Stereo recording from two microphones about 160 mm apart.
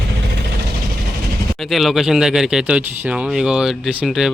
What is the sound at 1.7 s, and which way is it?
Speech, centre (ahead or behind).